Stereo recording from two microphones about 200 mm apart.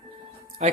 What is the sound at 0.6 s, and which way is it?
Speech, 30° right (ahead or behind).